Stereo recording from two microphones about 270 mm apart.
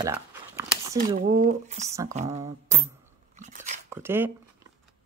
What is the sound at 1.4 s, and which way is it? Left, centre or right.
Speech, right.